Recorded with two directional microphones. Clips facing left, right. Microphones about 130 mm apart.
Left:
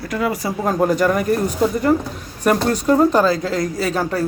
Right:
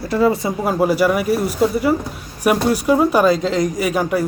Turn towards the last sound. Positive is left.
turn(degrees=-15)  # may be behind; listen again after turning